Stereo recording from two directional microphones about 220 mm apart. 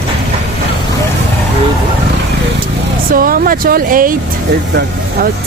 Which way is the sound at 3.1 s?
40° right (ahead or behind).